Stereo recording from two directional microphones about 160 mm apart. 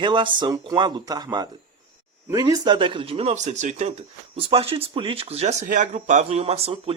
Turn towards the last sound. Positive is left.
turn(degrees=-40)  # may be behind; listen again after turning